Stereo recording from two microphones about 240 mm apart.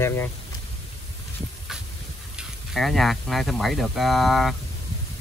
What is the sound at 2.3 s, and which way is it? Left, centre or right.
Speech, centre.